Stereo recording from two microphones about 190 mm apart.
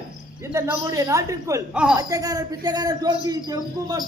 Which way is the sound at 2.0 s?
20° right (ahead or behind).